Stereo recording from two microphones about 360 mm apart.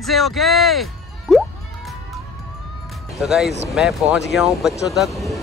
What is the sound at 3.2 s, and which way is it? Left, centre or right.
Speech, centre.